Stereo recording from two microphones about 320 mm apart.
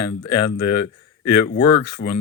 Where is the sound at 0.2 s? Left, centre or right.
Left.